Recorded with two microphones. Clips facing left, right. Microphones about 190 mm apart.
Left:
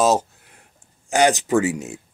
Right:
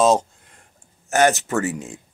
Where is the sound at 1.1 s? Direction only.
15° left (ahead or behind).